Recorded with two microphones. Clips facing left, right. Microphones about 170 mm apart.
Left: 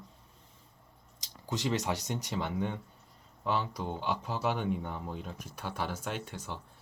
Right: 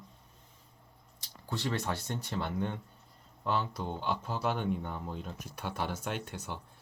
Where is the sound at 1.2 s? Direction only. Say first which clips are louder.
Left 2 dB; 15° left (ahead or behind).